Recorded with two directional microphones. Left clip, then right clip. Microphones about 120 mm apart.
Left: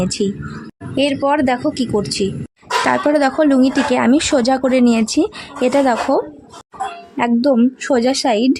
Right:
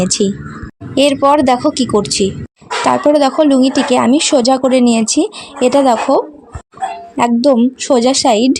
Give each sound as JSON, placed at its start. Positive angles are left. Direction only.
{"t": 0.0, "sound": "speech", "side_deg": -40}